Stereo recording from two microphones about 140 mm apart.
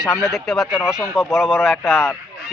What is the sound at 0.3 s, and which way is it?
A man's voice, centre (ahead or behind).